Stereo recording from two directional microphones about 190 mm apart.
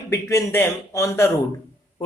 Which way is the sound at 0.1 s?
15° left (ahead or behind).